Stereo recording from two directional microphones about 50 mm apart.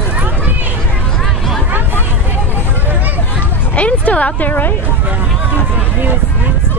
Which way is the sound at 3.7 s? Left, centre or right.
Left.